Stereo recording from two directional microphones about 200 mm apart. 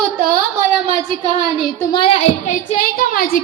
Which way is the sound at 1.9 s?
25° left (ahead or behind).